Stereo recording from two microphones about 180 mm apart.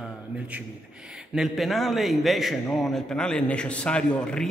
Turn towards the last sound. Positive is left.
turn(degrees=5)  # may be behind; listen again after turning